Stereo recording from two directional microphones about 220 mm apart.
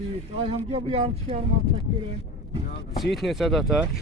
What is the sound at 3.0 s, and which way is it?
Speech, centre (ahead or behind).